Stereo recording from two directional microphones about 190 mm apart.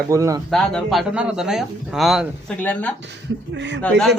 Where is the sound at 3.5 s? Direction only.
70° right (ahead or behind).